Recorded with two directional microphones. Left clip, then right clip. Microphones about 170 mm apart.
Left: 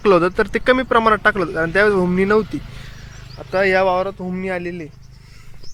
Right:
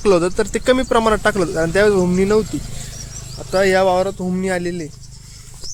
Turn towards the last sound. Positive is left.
turn(degrees=-25)  # may be behind; listen again after turning